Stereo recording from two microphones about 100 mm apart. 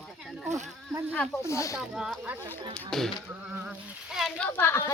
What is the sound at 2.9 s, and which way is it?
Speech, 5° left (ahead or behind).